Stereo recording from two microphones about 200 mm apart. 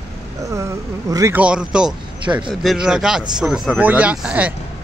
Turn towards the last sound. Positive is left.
turn(degrees=-5)  # may be behind; listen again after turning